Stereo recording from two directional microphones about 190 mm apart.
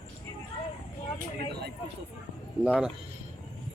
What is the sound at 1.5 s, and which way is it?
Speech, 60° right (ahead or behind).